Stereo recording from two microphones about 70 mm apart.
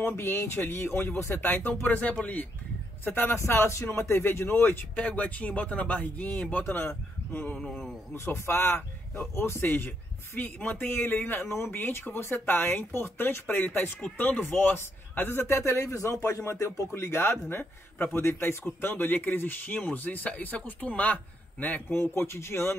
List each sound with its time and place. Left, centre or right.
0.0 s a man's voice: left
8.3 s a man's voice: left
21.9 s a man's voice: left